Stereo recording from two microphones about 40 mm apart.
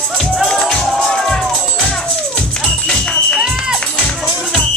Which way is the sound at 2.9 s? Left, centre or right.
Left.